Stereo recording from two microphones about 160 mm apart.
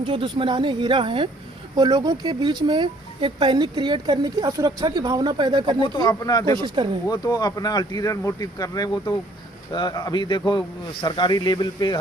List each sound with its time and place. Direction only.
0.0 s speech: 35° right (ahead or behind)
5.8 s speech: 25° left (ahead or behind)
6.8 s speech: 35° right (ahead or behind)
7.1 s speech: 25° left (ahead or behind)